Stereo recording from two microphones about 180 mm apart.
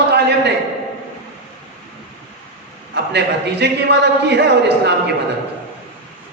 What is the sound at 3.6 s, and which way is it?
A man's voice, 70° right (ahead or behind).